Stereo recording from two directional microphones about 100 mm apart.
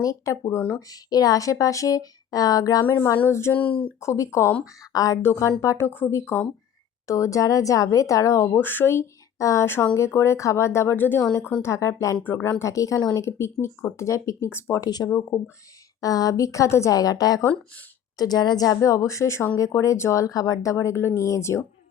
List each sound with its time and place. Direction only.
0.0 s speech: 35° left (ahead or behind)
3.2 s speech: 25° left (ahead or behind)
3.6 s speech: 15° left (ahead or behind)
4.0 s speech: 30° left (ahead or behind)
14.8 s speech: 45° left (ahead or behind)
15.3 s speech: 20° left (ahead or behind)
16.0 s speech: 35° left (ahead or behind)